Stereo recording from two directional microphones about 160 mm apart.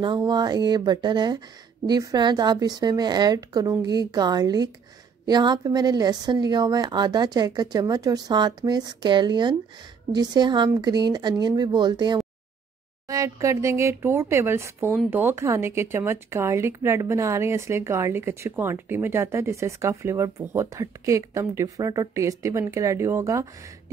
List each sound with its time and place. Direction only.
0.0 s a woman's voice: 25° right (ahead or behind)